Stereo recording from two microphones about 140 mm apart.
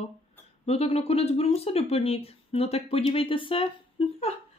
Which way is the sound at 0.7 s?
45° left (ahead or behind).